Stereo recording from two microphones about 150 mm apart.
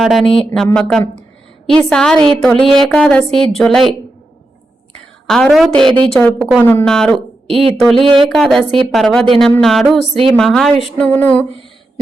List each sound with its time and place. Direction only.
0.0 s a woman's voice: centre (ahead or behind)
5.2 s a woman's voice: 5° left (ahead or behind)
5.7 s a woman's voice: 35° right (ahead or behind)
6.1 s a woman's voice: 5° left (ahead or behind)
6.8 s a woman's voice: 5° left (ahead or behind)
7.4 s a woman's voice: 40° right (ahead or behind)
8.4 s a woman's voice: centre (ahead or behind)